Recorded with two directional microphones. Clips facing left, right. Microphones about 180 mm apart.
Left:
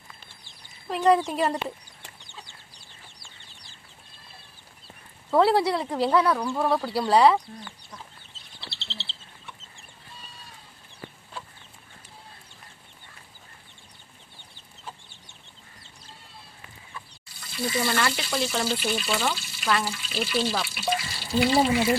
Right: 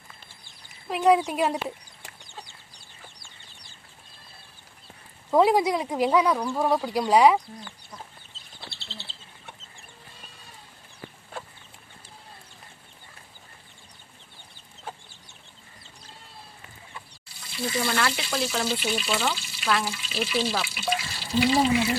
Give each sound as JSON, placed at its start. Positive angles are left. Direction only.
{"t": 0.9, "sound": "speech", "side_deg": -10}
{"t": 5.3, "sound": "speech", "side_deg": -15}
{"t": 8.6, "sound": "chicken", "side_deg": -50}
{"t": 17.6, "sound": "speech", "side_deg": 0}